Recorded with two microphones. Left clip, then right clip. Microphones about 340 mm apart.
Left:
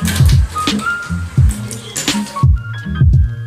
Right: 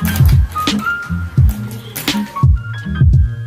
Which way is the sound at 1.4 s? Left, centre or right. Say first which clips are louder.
Left 1 dB; centre.